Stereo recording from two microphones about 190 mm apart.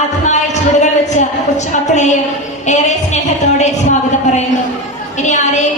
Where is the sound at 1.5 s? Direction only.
40° left (ahead or behind).